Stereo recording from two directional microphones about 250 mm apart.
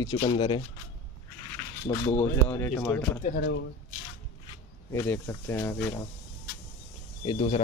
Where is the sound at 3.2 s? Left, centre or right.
Left.